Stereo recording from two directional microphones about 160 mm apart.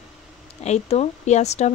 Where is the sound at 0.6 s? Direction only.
45° left (ahead or behind).